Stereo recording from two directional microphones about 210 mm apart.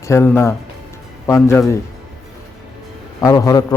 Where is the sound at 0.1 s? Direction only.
10° left (ahead or behind).